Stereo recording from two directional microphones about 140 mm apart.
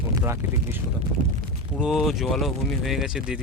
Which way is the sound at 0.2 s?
20° right (ahead or behind).